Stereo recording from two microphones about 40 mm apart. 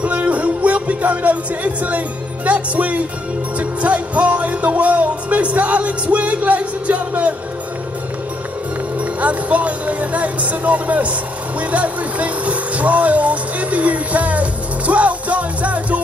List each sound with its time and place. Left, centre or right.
0.0 s music: right
9.2 s music: right
11.7 s speech: right